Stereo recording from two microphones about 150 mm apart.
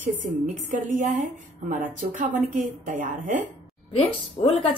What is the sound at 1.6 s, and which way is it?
Speech, 60° right (ahead or behind).